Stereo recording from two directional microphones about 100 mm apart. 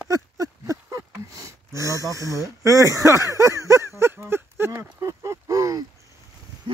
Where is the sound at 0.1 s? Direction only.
35° right (ahead or behind).